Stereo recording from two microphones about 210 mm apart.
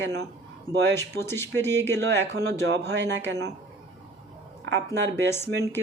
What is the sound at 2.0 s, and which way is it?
Speech, 55° right (ahead or behind).